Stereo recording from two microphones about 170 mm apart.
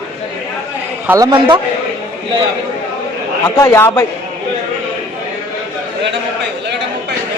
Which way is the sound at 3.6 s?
15° left (ahead or behind).